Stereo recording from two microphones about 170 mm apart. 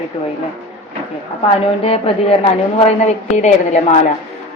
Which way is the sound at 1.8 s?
35° left (ahead or behind).